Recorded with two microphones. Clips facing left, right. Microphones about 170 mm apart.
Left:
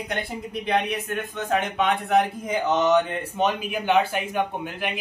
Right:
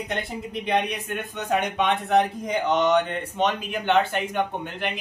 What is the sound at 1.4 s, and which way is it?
Speech, centre (ahead or behind).